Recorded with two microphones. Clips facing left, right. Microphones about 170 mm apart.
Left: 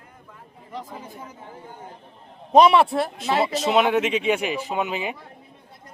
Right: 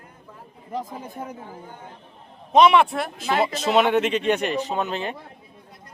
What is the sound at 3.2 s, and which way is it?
Speech, centre (ahead or behind).